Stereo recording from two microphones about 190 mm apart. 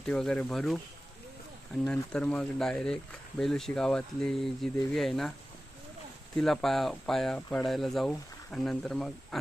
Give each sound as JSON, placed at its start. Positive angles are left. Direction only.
{"t": 0.0, "sound": "speech", "side_deg": 5}
{"t": 1.8, "sound": "speech", "side_deg": 5}
{"t": 6.3, "sound": "speech", "side_deg": 0}